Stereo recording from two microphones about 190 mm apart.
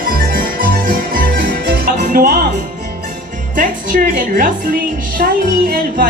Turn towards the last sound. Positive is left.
turn(degrees=-50)  # may be behind; listen again after turning